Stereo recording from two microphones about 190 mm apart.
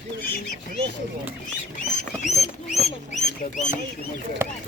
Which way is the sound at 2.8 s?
40° left (ahead or behind).